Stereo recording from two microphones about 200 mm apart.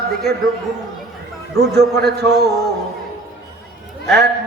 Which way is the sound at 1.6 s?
55° right (ahead or behind).